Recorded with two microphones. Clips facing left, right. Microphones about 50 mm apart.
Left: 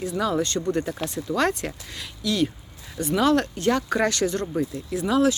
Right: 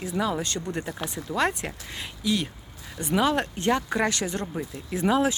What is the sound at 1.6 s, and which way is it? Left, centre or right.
Speech, centre.